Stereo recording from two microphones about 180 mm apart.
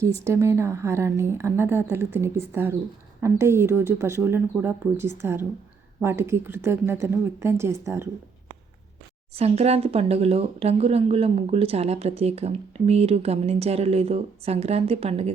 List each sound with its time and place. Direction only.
0.0 s speech: 15° right (ahead or behind)
9.3 s speech: 35° right (ahead or behind)